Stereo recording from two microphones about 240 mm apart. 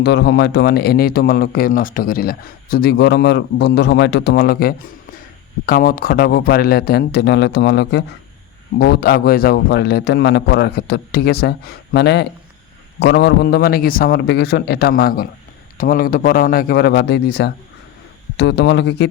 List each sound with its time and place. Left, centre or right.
0.0 s a man's voice: left